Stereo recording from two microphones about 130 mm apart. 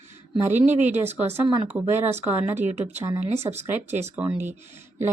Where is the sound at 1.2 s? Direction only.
15° right (ahead or behind).